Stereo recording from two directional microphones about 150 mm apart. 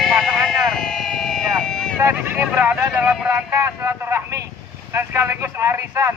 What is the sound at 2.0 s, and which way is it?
Speech, 15° right (ahead or behind).